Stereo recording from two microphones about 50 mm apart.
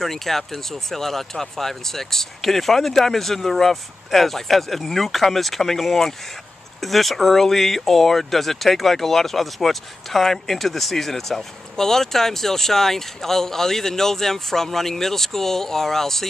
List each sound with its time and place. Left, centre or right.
0.0 s speech: centre